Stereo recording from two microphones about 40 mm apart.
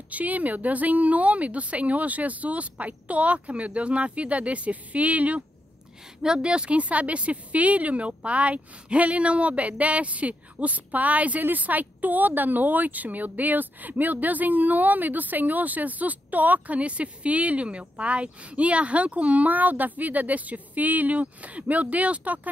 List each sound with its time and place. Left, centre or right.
0.1 s speech: right
6.2 s speech: right